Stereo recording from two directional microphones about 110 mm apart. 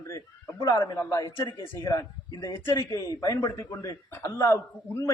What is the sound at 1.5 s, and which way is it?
Speech, 45° left (ahead or behind).